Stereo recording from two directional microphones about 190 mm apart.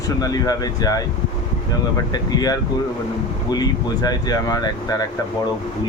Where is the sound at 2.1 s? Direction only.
20° left (ahead or behind).